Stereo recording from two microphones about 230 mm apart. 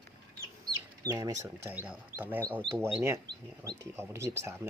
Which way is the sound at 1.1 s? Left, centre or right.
Centre.